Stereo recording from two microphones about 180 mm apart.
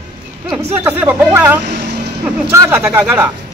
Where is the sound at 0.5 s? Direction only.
10° right (ahead or behind).